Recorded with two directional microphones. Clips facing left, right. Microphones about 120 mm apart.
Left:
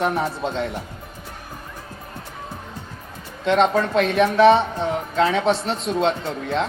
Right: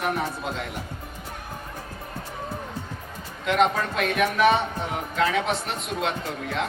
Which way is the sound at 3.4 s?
30° left (ahead or behind).